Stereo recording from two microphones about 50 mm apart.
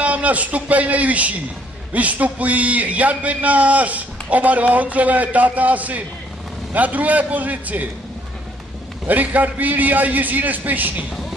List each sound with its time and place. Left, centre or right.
0.0 s a man's voice: right
9.0 s a man's voice: right